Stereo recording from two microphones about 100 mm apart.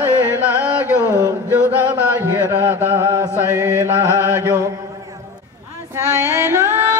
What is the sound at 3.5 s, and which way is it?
Speech, 25° right (ahead or behind).